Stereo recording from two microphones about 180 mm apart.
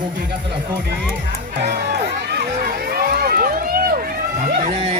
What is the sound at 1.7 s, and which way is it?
Run, 55° right (ahead or behind).